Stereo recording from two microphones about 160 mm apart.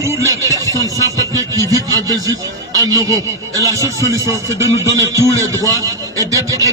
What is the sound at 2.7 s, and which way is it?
Speech, 25° right (ahead or behind).